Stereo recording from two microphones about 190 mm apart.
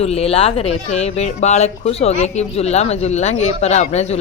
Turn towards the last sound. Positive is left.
turn(degrees=35)  # may be behind; listen again after turning